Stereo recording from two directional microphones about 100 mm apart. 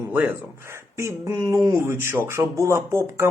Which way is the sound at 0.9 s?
30° right (ahead or behind).